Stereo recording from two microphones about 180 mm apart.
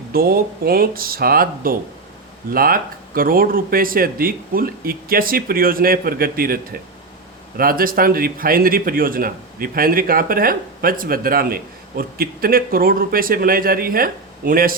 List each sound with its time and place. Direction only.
0.1 s a man's voice: 55° right (ahead or behind)